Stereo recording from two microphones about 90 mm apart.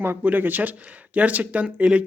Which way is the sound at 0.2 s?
20° right (ahead or behind).